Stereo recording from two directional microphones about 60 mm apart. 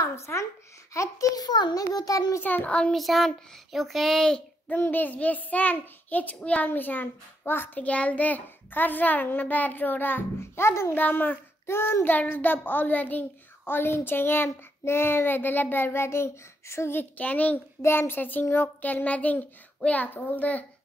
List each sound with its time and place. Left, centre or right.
0.0 s a woman's voice: left
0.9 s a child's voice: left
2.4 s a child's voice: left
2.9 s speech: centre
4.6 s a child's voice: left
7.8 s a child's voice: left
11.0 s a child's voice: left
11.6 s a child's voice: left
13.7 s a child's voice: left
17.2 s a child's voice: left
17.8 s a child's voice: left